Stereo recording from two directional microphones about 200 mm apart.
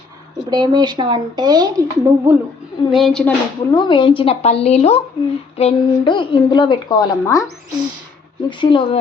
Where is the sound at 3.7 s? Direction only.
20° left (ahead or behind).